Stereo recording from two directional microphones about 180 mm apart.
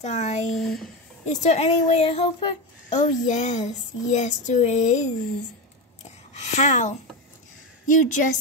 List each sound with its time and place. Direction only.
0.0 s speech: 40° left (ahead or behind)
0.6 s speech: centre (ahead or behind)
1.3 s speech: 40° left (ahead or behind)
2.9 s speech: 40° left (ahead or behind)
6.0 s a sound: 40° left (ahead or behind)
7.8 s a woman's voice: 45° left (ahead or behind)